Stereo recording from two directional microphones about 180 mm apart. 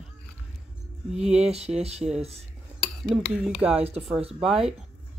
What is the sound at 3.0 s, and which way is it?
Speech, 5° right (ahead or behind).